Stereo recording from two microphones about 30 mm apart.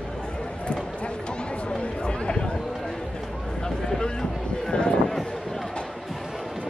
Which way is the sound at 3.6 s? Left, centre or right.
Left.